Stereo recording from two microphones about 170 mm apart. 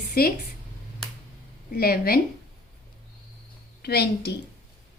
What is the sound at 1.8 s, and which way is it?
Speech, 65° left (ahead or behind).